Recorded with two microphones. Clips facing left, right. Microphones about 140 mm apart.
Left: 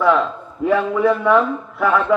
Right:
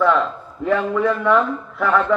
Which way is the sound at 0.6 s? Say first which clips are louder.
Left 2 dB; 10° left (ahead or behind).